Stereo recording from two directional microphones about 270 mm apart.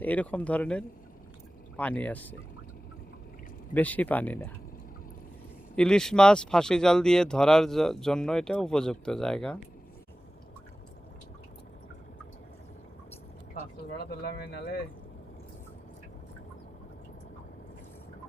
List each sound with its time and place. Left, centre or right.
0.0 s speech: centre
3.8 s speech: centre
5.7 s speech: centre
14.0 s speech: left